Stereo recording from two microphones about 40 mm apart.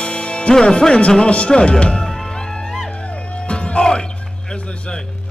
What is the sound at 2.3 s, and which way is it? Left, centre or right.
Music, centre.